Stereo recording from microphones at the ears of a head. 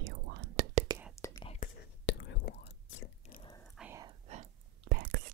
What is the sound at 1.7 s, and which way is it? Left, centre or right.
Whispering, left.